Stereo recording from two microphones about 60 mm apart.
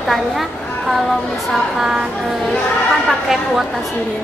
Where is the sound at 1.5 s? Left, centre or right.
Centre.